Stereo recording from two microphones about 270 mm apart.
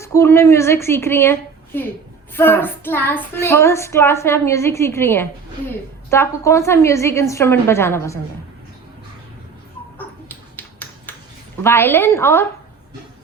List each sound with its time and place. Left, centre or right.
0.0 s a woman's voice: centre
2.3 s child singing: centre
10.0 s dog: centre
11.6 s child singing: centre